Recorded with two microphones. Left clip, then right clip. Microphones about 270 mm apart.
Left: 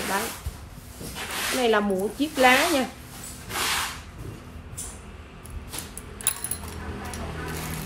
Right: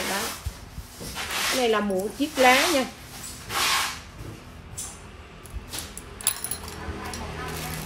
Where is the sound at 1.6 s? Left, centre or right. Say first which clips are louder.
Left 1 dB; centre.